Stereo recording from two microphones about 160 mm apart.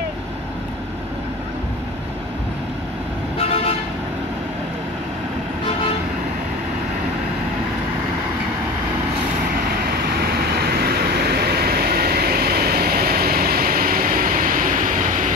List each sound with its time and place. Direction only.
3.3 s vehicle: 40° left (ahead or behind)
10.0 s vehicle: 75° right (ahead or behind); by 15.3 s 55° right (ahead or behind)